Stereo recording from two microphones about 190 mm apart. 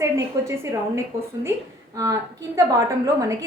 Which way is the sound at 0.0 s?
15° right (ahead or behind).